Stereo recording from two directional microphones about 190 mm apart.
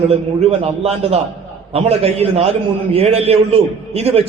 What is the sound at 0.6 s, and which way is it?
A man's voice, 35° right (ahead or behind).